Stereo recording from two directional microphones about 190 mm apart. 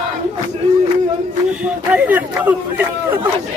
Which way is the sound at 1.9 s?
10° right (ahead or behind).